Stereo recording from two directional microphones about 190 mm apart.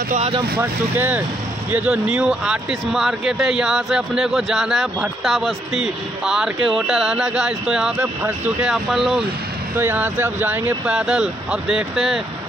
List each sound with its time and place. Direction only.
0.1 s speech: 35° right (ahead or behind)
0.6 s a man's voice: 10° right (ahead or behind)